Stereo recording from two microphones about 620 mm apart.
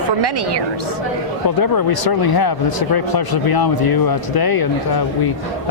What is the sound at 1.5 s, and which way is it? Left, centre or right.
Speech, left.